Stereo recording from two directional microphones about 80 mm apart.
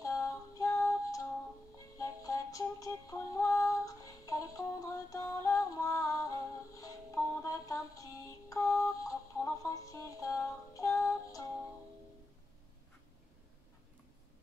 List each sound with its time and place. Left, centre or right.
0.0 s music: left